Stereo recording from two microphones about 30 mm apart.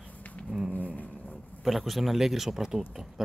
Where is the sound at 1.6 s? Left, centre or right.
Centre.